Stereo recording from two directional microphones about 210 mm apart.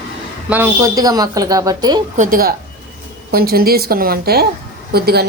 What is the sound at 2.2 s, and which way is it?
Speech, 40° right (ahead or behind).